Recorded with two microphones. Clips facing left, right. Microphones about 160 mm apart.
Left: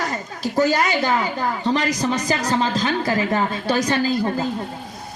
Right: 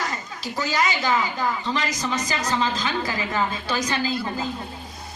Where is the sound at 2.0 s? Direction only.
35° left (ahead or behind).